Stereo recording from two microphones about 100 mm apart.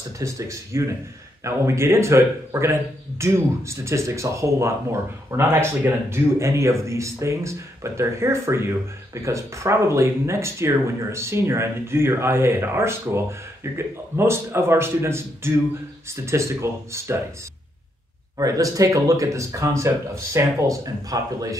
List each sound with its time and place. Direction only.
0.2 s speech: 30° right (ahead or behind)
18.4 s speech: 35° right (ahead or behind)